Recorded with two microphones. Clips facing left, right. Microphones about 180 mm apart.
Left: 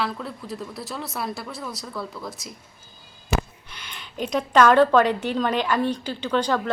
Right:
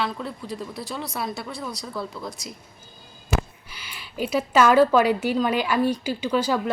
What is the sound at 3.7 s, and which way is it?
A woman's voice, 5° right (ahead or behind).